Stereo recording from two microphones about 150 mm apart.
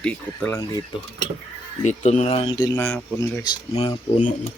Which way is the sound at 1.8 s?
50° left (ahead or behind).